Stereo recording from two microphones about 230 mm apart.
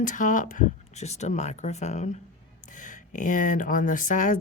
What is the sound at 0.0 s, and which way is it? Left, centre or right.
Speech, left.